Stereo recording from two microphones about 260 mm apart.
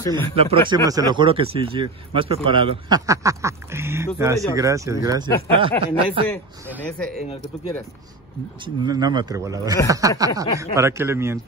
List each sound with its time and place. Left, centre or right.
0.0 s speech: centre
0.4 s a man's voice: right
6.8 s speech: centre
8.6 s speech: centre